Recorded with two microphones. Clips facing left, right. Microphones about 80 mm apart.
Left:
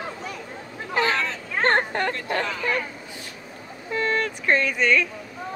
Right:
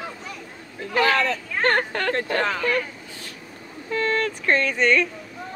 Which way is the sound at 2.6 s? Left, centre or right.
Centre.